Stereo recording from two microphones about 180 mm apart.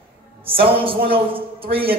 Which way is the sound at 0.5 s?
30° right (ahead or behind).